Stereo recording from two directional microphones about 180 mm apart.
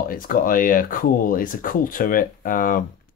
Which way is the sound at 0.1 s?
50° left (ahead or behind).